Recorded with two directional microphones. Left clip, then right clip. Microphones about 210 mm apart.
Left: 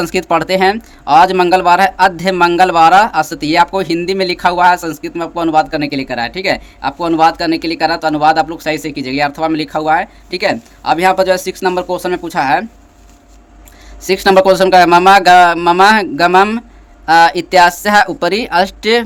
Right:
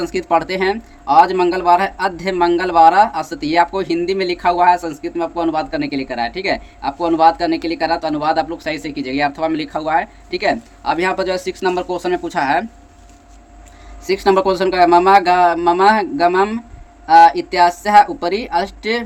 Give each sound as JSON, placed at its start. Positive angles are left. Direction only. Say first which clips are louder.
{"t": 0.0, "sound": "speech", "louder": "left 3 dB", "side_deg": 35}
{"t": 14.0, "sound": "speech", "louder": "left 5 dB", "side_deg": 35}